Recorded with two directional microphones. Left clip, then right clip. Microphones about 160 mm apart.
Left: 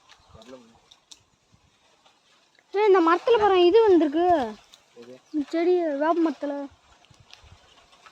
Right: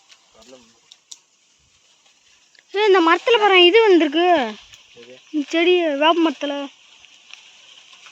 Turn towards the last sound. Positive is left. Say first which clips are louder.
# right 5 dB
turn(degrees=-35)  # may be behind; listen again after turning